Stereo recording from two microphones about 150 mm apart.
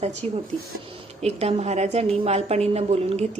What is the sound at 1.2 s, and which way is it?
A woman's voice, 45° right (ahead or behind).